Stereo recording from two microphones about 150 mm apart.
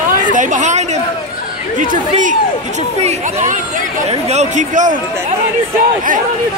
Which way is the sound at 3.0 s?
55° right (ahead or behind).